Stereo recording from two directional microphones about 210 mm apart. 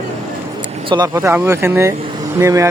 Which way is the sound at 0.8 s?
20° right (ahead or behind).